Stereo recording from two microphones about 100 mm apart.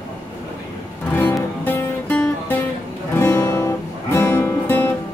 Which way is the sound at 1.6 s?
20° left (ahead or behind).